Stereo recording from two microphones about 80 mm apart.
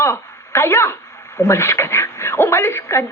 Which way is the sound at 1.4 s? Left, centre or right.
Left.